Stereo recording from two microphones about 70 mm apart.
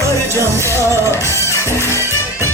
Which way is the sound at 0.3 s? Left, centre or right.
Right.